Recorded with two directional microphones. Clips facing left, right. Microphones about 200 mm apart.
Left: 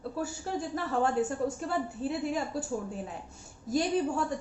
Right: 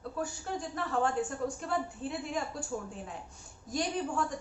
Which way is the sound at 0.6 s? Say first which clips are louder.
Left 2 dB; 5° left (ahead or behind).